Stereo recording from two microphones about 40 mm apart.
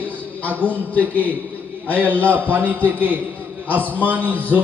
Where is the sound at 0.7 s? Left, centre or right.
Left.